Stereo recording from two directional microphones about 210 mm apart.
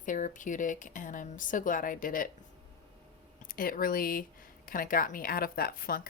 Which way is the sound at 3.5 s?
40° left (ahead or behind).